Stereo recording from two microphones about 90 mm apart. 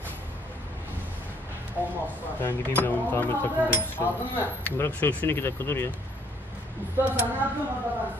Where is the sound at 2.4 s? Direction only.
25° left (ahead or behind).